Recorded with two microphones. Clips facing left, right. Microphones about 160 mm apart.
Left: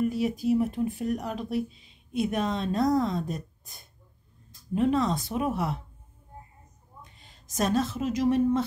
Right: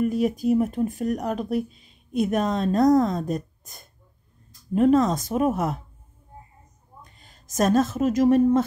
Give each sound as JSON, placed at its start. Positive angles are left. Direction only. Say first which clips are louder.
{"t": 0.0, "sound": "speech", "louder": "right 4 dB", "side_deg": -50}
{"t": 7.0, "sound": "speech", "louder": "right 1 dB", "side_deg": -45}